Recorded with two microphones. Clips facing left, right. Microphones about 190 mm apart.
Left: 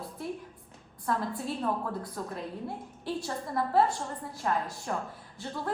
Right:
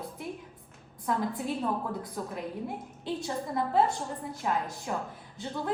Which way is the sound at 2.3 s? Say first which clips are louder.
Right 1 dB; 20° right (ahead or behind).